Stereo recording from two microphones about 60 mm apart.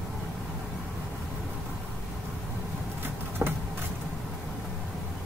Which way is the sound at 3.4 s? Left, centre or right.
Right.